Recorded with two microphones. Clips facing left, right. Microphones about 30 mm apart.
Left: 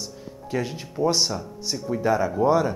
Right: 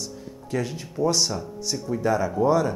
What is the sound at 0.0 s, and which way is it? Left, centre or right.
Speech, centre.